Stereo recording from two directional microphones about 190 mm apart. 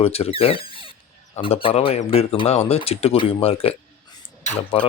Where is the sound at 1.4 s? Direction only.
30° left (ahead or behind).